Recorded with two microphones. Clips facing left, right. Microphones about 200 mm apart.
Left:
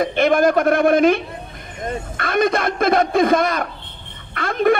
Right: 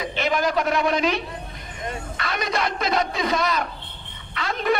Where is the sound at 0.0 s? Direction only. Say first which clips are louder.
Left 8 dB; 50° left (ahead or behind).